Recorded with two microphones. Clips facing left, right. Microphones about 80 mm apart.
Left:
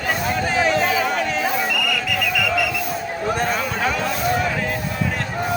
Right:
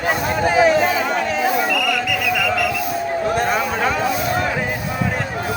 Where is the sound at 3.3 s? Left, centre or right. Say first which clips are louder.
Right 3 dB; centre.